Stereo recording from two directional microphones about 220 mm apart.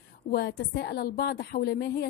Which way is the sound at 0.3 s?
45° left (ahead or behind).